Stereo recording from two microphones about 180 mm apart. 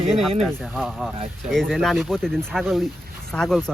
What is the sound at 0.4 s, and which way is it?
Speech, 5° left (ahead or behind).